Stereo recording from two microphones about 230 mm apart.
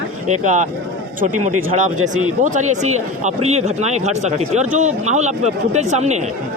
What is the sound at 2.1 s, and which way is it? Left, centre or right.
Speech, right.